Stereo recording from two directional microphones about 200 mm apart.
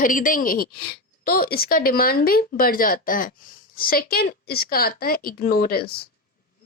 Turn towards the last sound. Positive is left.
turn(degrees=50)  # may be behind; listen again after turning